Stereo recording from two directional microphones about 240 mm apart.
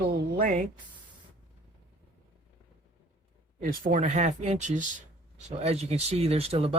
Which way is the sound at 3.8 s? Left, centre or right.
Right.